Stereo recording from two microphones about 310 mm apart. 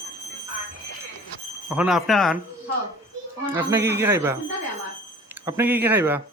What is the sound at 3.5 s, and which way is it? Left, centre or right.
Speech, centre.